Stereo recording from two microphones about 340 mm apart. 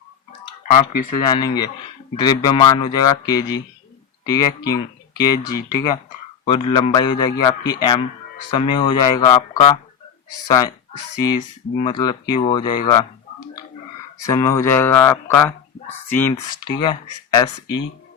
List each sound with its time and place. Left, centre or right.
0.7 s speech: left
1.2 s a man's voice: centre
11.2 s a man's voice: centre
14.3 s a man's voice: centre